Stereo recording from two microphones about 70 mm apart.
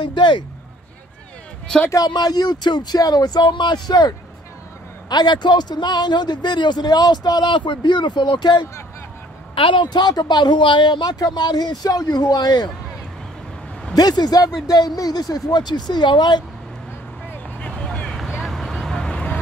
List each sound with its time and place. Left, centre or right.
0.0 s a man's voice: left
1.7 s speech: centre
2.0 s speech: left
5.1 s a man's voice: left
9.8 s speech: left
13.9 s speech: left
17.3 s vehicle: centre